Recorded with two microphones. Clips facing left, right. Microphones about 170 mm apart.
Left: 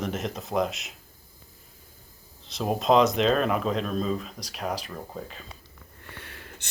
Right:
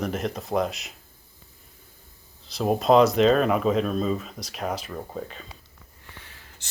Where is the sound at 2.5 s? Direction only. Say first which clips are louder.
Right 3 dB; centre (ahead or behind).